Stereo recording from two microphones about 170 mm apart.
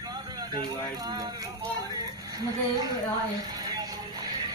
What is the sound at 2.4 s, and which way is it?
Music, 25° right (ahead or behind).